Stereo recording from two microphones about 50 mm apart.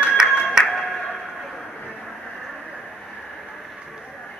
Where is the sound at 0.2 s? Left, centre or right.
Centre.